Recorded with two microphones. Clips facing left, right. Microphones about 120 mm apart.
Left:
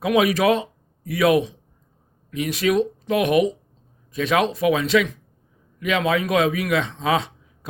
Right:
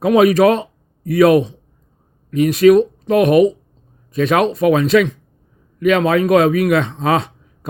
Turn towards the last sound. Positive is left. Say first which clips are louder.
# right 5 dB
turn(degrees=-55)  # may be behind; listen again after turning